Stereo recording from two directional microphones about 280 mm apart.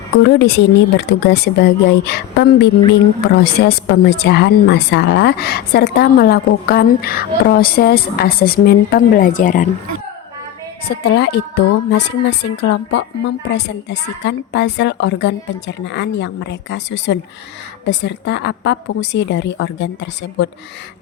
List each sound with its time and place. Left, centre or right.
0.2 s a woman's voice: left
10.8 s a woman's voice: left